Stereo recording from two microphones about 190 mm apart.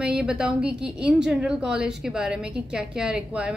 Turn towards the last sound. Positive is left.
turn(degrees=-5)  # may be behind; listen again after turning